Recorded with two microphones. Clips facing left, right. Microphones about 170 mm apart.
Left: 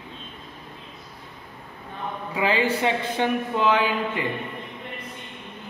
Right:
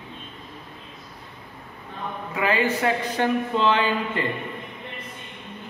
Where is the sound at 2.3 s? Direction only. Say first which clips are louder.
Even; 30° left (ahead or behind).